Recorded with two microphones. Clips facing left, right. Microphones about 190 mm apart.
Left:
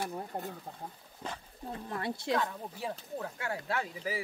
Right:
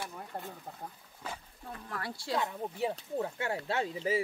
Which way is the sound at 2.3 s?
20° right (ahead or behind).